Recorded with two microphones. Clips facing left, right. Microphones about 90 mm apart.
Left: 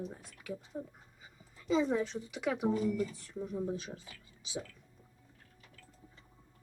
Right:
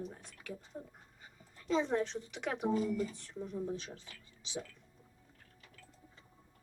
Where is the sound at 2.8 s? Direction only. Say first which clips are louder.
Left 2 dB; 30° right (ahead or behind).